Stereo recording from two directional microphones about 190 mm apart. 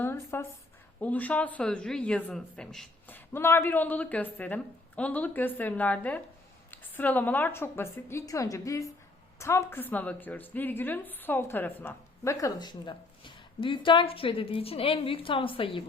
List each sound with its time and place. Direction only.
0.0 s a woman's voice: 10° left (ahead or behind); by 15.8 s 30° left (ahead or behind)